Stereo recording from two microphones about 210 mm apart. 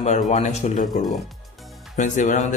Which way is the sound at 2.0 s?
35° left (ahead or behind).